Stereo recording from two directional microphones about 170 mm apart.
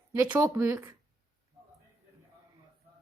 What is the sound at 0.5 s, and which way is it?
Speech, 10° right (ahead or behind).